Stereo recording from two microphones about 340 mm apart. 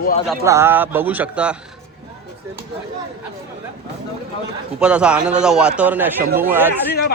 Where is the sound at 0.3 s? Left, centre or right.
Centre.